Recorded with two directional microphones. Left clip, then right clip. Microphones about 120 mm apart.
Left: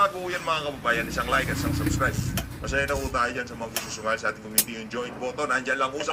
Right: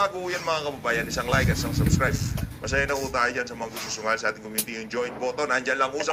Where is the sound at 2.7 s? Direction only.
20° right (ahead or behind).